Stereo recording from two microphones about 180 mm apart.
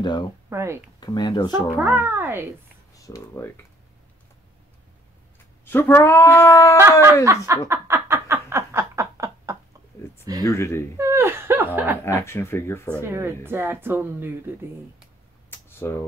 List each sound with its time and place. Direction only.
0.0 s speech: 25° left (ahead or behind)
0.5 s speech: 15° right (ahead or behind)
1.0 s speech: 25° left (ahead or behind)
1.8 s speech: 10° right (ahead or behind)
2.9 s speech: 20° left (ahead or behind)
5.7 s speech: 10° left (ahead or behind)
6.8 s speech: 15° right (ahead or behind)
7.2 s a sound: 15° right (ahead or behind)
10.4 s speech: 15° left (ahead or behind)
11.0 s speech: 15° right (ahead or behind)
12.0 s speech: 15° left (ahead or behind)
13.0 s speech: 15° right (ahead or behind)
15.5 s a sound: 10° left (ahead or behind)